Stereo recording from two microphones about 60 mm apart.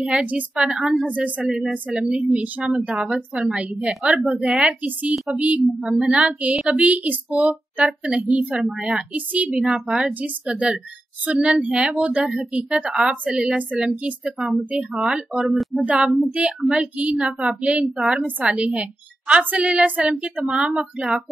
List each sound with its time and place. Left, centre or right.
0.0 s a woman's voice: centre
1.0 s a woman's voice: right
5.8 s a woman's voice: centre
8.6 s speech: centre
9.1 s a woman's voice: right
15.5 s a sound: centre
16.3 s a woman's voice: right